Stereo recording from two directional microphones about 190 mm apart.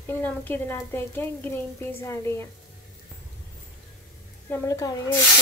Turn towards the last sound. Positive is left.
turn(degrees=15)  # may be behind; listen again after turning